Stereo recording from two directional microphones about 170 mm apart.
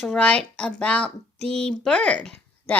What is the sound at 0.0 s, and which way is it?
Speech, 5° left (ahead or behind).